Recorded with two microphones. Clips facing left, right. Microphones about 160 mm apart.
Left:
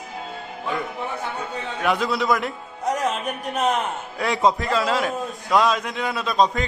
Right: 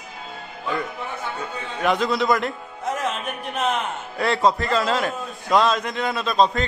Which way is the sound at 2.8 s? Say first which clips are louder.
Left 2 dB; 40° left (ahead or behind).